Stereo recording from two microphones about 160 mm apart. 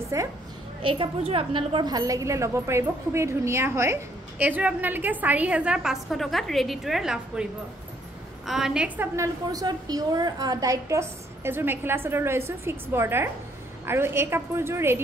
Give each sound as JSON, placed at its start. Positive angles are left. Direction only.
{"t": 0.1, "sound": "a woman's voice", "side_deg": -20}
{"t": 0.8, "sound": "a woman's voice", "side_deg": -35}
{"t": 8.5, "sound": "a woman's voice", "side_deg": -5}